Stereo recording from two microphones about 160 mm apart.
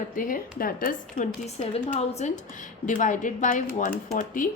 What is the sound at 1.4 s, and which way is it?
A woman's voice, 45° left (ahead or behind).